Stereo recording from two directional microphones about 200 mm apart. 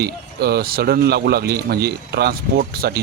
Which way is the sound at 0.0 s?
50° right (ahead or behind).